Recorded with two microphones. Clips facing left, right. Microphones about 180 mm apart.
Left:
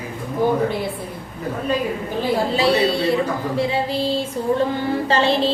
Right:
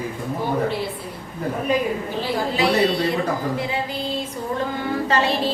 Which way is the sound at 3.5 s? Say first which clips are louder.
Left 4 dB; 30° left (ahead or behind).